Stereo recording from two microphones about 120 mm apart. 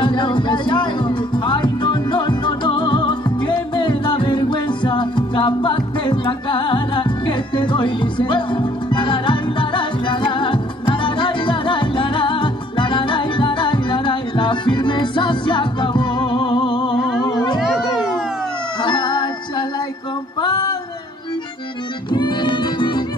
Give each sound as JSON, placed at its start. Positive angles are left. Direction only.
{"t": 0.0, "sound": "music", "side_deg": 40}
{"t": 17.6, "sound": "children playing", "side_deg": -5}
{"t": 18.8, "sound": "music", "side_deg": 40}
{"t": 20.3, "sound": "female singing", "side_deg": 35}
{"t": 22.1, "sound": "music", "side_deg": 40}